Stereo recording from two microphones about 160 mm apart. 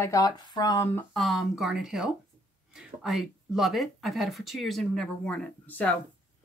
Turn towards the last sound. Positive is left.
turn(degrees=10)  # may be behind; listen again after turning